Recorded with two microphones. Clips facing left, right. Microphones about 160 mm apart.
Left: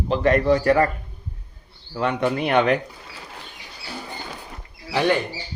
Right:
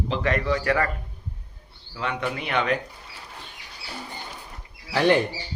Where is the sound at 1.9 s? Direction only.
45° left (ahead or behind).